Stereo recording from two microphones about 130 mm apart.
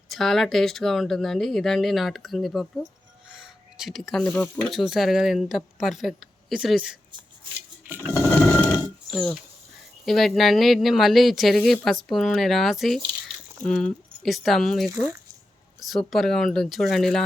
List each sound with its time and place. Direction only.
0.1 s speech: centre (ahead or behind)
3.3 s a sound: 5° right (ahead or behind)
4.4 s speech: 10° left (ahead or behind)
4.7 s speech: centre (ahead or behind)
8.2 s mechanisms: 15° left (ahead or behind)
9.0 s speech: centre (ahead or behind)
14.8 s speech: 20° right (ahead or behind)
15.8 s speech: centre (ahead or behind)